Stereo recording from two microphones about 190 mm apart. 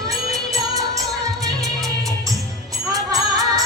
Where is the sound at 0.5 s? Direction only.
20° right (ahead or behind).